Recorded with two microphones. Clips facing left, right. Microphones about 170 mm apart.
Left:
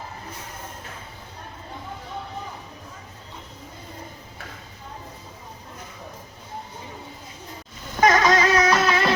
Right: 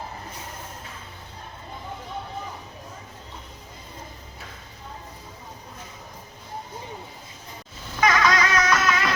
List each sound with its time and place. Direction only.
8.0 s vehicle: 45° left (ahead or behind)
8.4 s music: 30° left (ahead or behind)